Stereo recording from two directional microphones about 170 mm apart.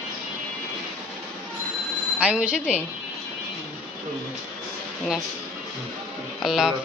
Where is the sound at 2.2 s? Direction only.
5° right (ahead or behind).